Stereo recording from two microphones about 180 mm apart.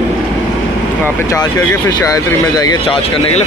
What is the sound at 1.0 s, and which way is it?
Speech, 15° left (ahead or behind).